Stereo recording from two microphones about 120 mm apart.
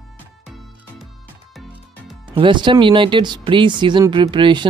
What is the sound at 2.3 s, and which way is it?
Speech, 40° right (ahead or behind).